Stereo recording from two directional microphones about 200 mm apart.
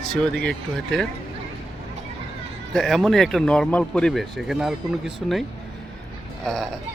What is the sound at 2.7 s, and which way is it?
Speech, centre (ahead or behind).